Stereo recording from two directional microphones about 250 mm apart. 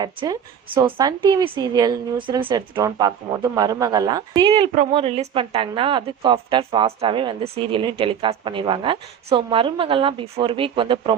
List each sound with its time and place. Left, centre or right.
0.0 s a woman's voice: centre